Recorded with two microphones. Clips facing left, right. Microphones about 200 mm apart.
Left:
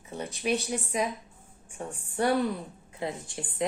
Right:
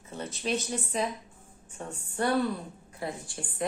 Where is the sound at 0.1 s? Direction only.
15° left (ahead or behind).